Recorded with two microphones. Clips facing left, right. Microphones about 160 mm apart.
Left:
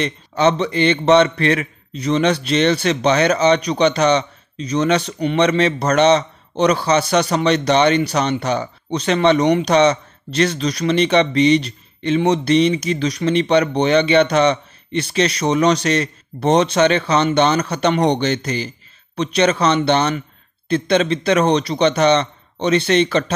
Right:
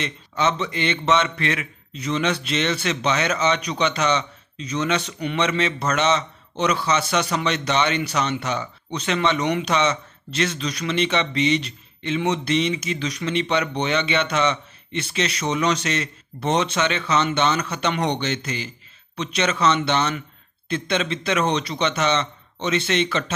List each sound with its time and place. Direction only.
0.0 s a man's voice: 35° left (ahead or behind)